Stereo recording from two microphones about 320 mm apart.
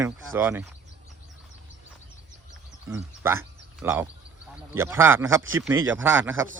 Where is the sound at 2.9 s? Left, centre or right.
Centre.